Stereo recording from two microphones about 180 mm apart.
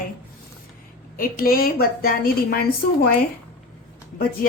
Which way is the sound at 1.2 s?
55° left (ahead or behind).